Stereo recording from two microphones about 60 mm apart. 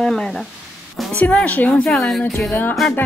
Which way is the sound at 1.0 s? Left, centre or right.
Centre.